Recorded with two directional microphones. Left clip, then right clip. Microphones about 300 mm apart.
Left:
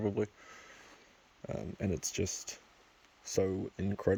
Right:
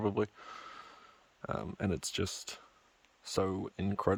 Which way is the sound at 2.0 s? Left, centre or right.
Centre.